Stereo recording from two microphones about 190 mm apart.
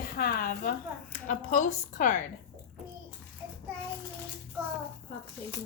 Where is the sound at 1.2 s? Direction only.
40° left (ahead or behind).